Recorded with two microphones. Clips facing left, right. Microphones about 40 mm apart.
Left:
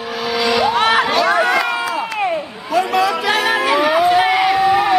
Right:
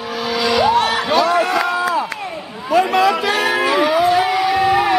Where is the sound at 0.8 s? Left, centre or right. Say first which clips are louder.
Left 3 dB; left.